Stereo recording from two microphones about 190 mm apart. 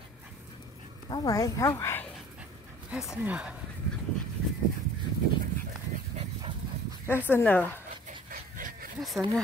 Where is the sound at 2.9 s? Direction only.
5° right (ahead or behind).